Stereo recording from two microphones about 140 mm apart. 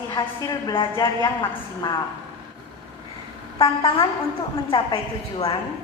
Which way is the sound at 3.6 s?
40° left (ahead or behind).